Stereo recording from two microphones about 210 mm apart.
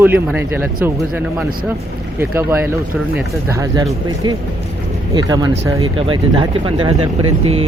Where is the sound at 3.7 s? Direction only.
15° right (ahead or behind).